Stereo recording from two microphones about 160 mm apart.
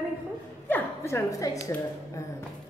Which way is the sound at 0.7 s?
15° left (ahead or behind).